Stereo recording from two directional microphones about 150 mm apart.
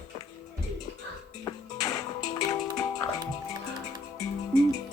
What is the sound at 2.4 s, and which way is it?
Music, 25° left (ahead or behind).